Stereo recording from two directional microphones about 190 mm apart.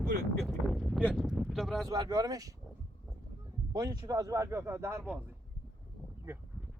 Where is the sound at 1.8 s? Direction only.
20° right (ahead or behind).